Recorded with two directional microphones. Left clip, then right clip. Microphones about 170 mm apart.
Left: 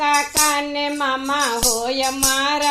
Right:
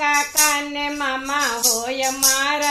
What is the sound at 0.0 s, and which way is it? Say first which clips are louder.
Music: left 1 dB; 35° left (ahead or behind).